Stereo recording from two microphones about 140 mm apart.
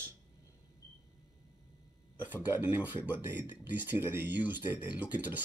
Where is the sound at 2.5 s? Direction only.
10° right (ahead or behind).